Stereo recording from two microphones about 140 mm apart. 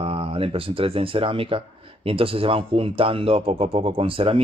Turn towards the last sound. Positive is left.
turn(degrees=-40)  # may be behind; listen again after turning